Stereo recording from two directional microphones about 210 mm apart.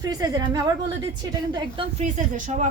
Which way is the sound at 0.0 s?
15° right (ahead or behind).